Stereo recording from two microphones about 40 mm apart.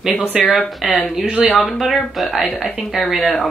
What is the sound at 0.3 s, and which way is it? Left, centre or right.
Speech, centre.